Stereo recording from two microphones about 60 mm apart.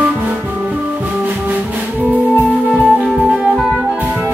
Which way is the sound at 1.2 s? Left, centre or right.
Right.